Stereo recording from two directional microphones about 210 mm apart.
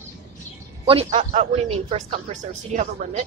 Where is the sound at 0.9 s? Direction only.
30° right (ahead or behind).